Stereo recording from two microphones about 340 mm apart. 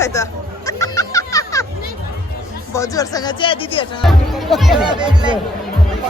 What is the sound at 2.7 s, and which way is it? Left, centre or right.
Speech, centre.